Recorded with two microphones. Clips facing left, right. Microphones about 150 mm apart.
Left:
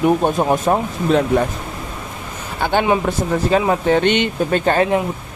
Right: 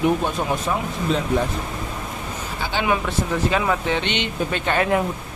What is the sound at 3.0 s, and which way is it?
Speech, 35° left (ahead or behind).